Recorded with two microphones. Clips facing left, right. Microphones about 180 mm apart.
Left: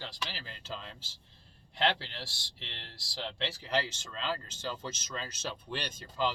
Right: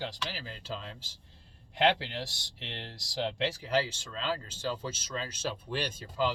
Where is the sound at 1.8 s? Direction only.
15° right (ahead or behind).